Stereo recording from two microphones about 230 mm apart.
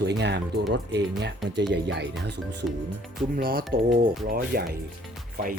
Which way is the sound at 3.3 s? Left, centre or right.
Right.